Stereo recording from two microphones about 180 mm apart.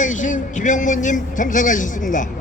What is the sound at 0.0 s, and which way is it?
Speech, 45° left (ahead or behind).